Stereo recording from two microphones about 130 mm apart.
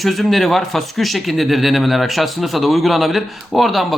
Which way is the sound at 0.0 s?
Centre (ahead or behind).